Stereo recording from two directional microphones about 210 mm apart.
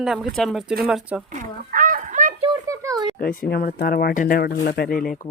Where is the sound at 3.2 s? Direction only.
45° left (ahead or behind).